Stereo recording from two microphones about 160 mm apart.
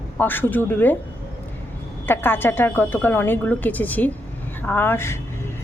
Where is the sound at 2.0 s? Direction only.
15° left (ahead or behind).